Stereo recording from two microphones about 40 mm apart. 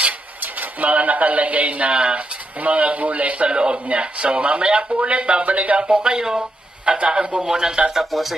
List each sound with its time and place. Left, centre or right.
0.6 s speech: right
5.9 s speech: right
8.0 s speech: centre